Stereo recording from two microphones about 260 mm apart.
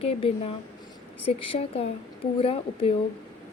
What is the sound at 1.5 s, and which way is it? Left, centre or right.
A woman's voice, left.